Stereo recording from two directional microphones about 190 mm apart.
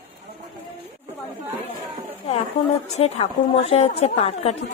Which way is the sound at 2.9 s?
35° left (ahead or behind).